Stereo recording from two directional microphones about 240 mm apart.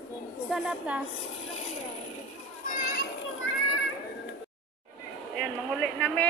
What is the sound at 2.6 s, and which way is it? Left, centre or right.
Children playing, left.